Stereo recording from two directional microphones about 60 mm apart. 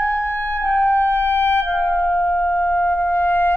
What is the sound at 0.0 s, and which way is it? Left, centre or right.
Music, left.